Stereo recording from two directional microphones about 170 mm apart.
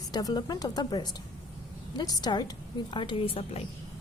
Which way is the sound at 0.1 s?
25° left (ahead or behind).